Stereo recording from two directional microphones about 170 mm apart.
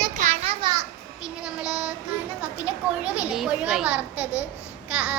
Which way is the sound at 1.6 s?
5° right (ahead or behind).